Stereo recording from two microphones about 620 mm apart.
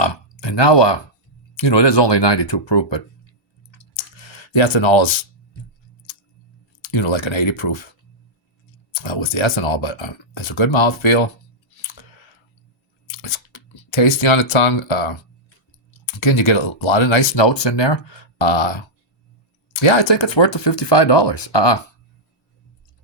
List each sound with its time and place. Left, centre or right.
0.0 s speech: left
4.2 s speech: left
6.9 s speech: left
9.0 s speech: left
13.1 s speech: left